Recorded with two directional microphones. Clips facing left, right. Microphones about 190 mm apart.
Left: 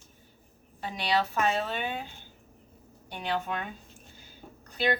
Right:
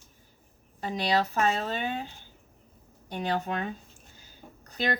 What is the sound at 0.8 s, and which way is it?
Speech, 40° right (ahead or behind).